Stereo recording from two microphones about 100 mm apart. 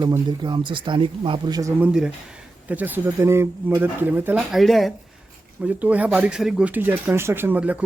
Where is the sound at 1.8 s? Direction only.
10° right (ahead or behind).